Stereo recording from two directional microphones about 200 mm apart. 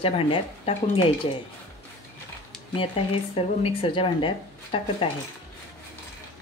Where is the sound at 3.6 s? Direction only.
30° left (ahead or behind).